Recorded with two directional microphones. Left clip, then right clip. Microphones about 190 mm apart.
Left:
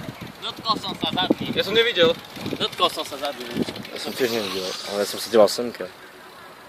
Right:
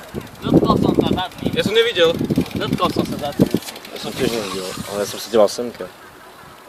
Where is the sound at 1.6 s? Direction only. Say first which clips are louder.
Right 4 dB; 45° right (ahead or behind).